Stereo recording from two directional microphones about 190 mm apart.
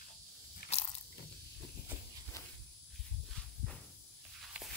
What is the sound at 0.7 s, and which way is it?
Biting, 35° left (ahead or behind).